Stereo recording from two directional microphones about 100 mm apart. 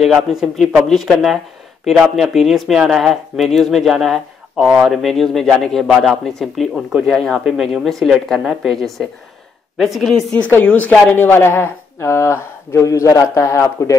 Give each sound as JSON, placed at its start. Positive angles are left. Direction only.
{"t": 0.0, "sound": "speech", "side_deg": -5}
{"t": 10.5, "sound": "a woman's voice", "side_deg": 15}